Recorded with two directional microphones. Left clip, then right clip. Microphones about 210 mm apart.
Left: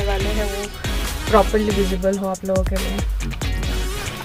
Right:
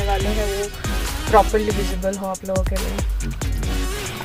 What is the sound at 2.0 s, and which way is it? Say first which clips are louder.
Music: even; centre (ahead or behind).